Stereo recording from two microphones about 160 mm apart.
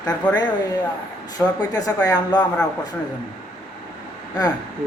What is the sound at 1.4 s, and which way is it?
Speech, 25° left (ahead or behind).